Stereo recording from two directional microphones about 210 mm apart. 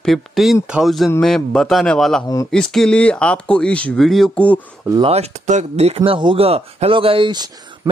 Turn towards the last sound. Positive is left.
turn(degrees=-20)  # may be behind; listen again after turning